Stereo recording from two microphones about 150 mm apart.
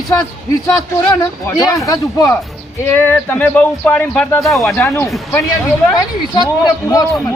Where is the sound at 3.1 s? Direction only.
10° left (ahead or behind).